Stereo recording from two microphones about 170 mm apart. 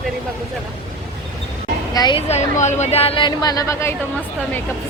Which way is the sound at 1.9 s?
25° left (ahead or behind).